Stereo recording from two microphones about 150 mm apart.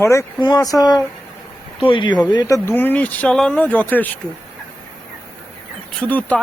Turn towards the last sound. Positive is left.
turn(degrees=10)  # may be behind; listen again after turning